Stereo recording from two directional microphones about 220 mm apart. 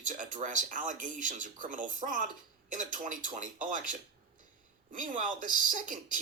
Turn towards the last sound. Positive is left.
turn(degrees=-35)  # may be behind; listen again after turning